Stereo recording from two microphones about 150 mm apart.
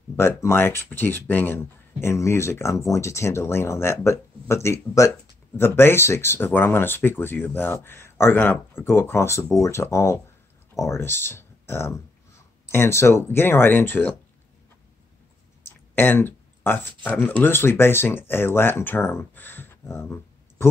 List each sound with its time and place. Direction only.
0.1 s speech: 15° left (ahead or behind)
15.9 s speech: 15° left (ahead or behind)